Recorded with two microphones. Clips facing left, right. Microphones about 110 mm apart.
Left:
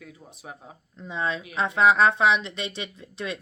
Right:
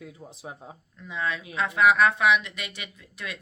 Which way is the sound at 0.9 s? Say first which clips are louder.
Left 2 dB; 25° left (ahead or behind).